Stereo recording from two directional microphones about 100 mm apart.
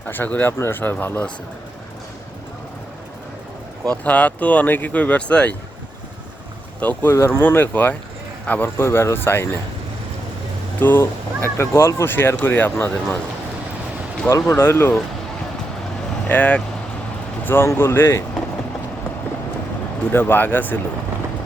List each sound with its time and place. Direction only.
0.1 s speech: 15° left (ahead or behind)
3.8 s speech: 15° left (ahead or behind)
6.7 s speech: 20° left (ahead or behind)
10.8 s speech: 20° left (ahead or behind)
14.3 s speech: 30° left (ahead or behind)
16.3 s speech: 15° left (ahead or behind)
20.1 s speech: 20° left (ahead or behind)